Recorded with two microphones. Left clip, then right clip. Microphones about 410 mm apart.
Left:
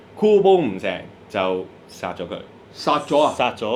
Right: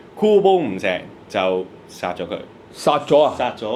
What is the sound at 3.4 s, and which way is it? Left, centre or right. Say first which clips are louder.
Speech: left 1 dB; left.